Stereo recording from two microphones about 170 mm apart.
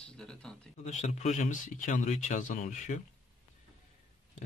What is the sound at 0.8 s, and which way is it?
Speech, 45° left (ahead or behind).